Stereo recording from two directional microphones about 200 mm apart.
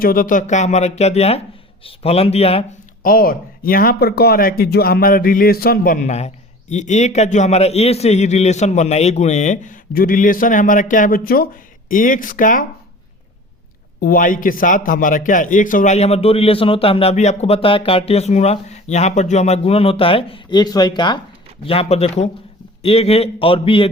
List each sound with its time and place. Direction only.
0.0 s a man's voice: 45° left (ahead or behind); by 2.6 s 30° left (ahead or behind)
3.0 s speech: 45° left (ahead or behind)
14.0 s a man's voice: 45° left (ahead or behind); by 23.9 s 25° left (ahead or behind)